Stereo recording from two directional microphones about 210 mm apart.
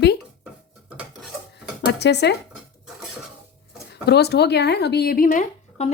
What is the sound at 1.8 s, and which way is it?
Speech, 55° left (ahead or behind).